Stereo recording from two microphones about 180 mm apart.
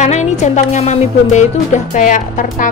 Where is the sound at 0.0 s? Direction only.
40° left (ahead or behind).